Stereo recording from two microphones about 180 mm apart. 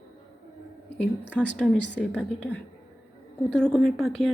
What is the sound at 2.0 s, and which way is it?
Speech, 5° left (ahead or behind).